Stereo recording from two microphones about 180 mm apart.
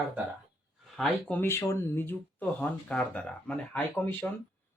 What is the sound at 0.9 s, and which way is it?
Speech, centre (ahead or behind).